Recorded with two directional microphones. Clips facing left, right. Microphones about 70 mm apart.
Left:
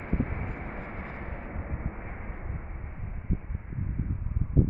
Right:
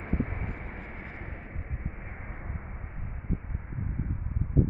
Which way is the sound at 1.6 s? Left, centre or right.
Centre.